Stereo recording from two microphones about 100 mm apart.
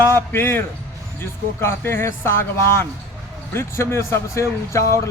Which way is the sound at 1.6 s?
25° left (ahead or behind).